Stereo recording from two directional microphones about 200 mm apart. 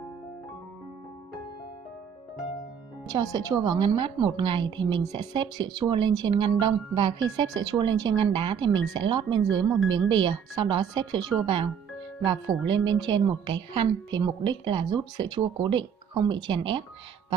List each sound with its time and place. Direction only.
3.1 s speech: 20° right (ahead or behind)